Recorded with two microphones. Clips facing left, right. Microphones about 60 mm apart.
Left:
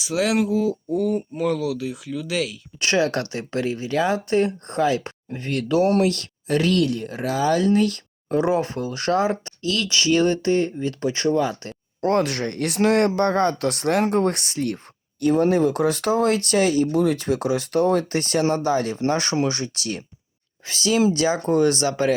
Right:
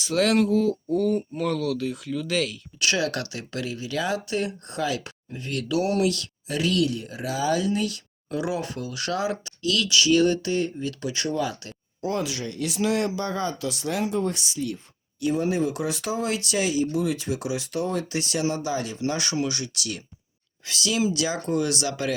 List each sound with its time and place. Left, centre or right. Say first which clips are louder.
0.0 s speech: even; centre
2.8 s speech: left 5 dB; left
12.0 s speech: left 7 dB; left